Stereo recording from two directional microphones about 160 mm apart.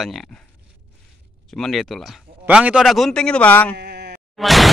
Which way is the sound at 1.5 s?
Centre (ahead or behind).